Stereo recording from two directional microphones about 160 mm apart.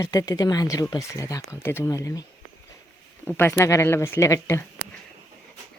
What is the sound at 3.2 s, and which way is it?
Speech, 15° left (ahead or behind).